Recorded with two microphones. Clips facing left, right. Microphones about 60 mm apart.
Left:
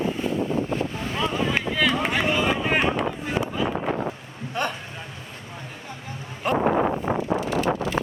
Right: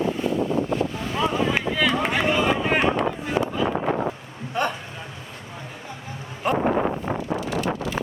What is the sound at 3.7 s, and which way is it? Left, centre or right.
Wind noise, right.